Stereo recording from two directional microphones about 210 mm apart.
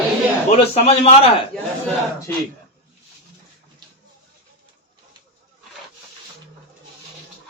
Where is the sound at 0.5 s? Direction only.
30° left (ahead or behind).